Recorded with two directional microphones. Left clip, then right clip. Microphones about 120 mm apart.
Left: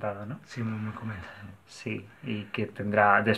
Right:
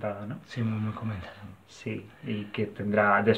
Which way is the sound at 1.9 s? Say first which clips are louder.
Even; 30° left (ahead or behind).